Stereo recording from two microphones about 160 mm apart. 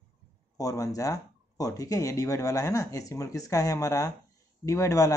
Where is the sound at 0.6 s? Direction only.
20° left (ahead or behind).